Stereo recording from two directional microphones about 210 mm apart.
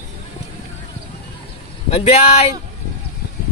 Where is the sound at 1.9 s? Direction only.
25° left (ahead or behind).